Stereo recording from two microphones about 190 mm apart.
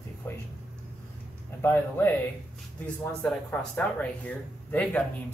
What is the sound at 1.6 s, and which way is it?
Speech, 10° left (ahead or behind).